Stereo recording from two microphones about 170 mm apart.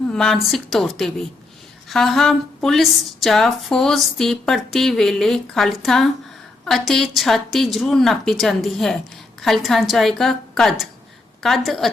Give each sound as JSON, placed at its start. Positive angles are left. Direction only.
{"t": 0.1, "sound": "a woman's voice", "side_deg": 5}